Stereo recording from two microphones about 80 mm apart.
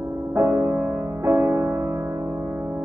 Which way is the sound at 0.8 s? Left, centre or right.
Right.